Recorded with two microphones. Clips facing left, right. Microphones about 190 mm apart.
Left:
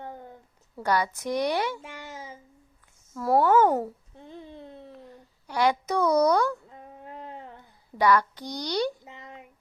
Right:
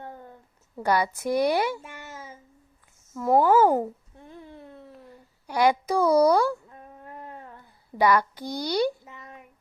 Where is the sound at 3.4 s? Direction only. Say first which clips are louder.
Right 1 dB; 10° right (ahead or behind).